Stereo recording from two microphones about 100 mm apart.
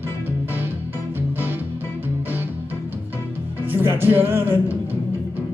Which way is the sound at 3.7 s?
20° right (ahead or behind).